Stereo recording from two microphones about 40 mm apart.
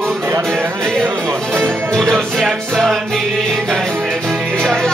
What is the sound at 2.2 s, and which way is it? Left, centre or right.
Music, centre.